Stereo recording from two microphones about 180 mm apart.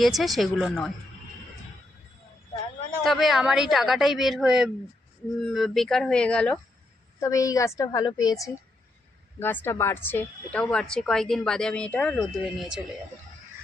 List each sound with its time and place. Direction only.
0.2 s a woman's voice: centre (ahead or behind)
3.0 s a woman's voice: centre (ahead or behind)
7.2 s a woman's voice: 20° left (ahead or behind)